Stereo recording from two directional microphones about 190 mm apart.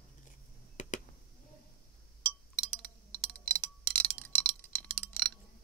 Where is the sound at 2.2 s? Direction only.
10° left (ahead or behind).